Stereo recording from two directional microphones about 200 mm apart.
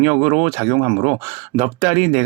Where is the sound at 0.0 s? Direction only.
25° right (ahead or behind).